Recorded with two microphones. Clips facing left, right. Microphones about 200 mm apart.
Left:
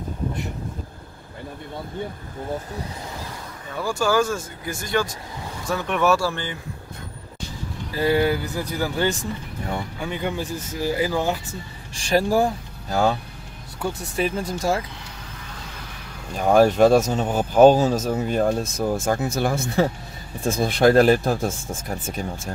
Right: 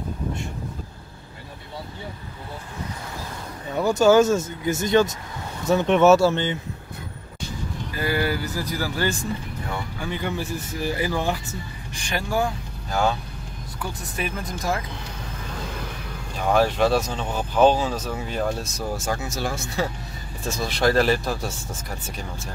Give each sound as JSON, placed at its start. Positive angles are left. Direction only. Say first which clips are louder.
{"t": 3.7, "sound": "speech", "louder": "right 5 dB", "side_deg": -20}
{"t": 7.9, "sound": "speech", "louder": "left 5 dB", "side_deg": 25}
{"t": 11.9, "sound": "speech", "louder": "left 7 dB", "side_deg": 35}
{"t": 16.3, "sound": "speech", "louder": "left 5 dB", "side_deg": 45}